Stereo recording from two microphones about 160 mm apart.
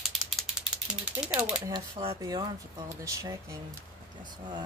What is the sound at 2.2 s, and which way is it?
Speech, 25° right (ahead or behind).